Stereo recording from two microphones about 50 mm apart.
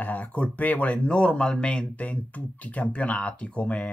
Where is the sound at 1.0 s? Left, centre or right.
Centre.